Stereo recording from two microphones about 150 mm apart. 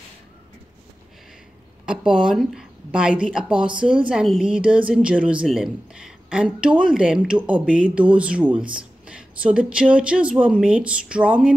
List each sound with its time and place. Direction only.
1.9 s a woman's voice: 5° right (ahead or behind)